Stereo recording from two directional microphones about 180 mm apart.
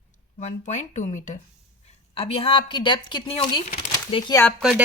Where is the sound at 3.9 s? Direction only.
20° left (ahead or behind).